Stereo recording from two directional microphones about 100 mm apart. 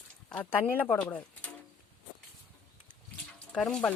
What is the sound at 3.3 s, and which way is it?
Speech, 10° left (ahead or behind).